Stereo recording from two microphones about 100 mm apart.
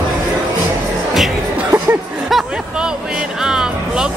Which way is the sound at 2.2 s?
5° right (ahead or behind).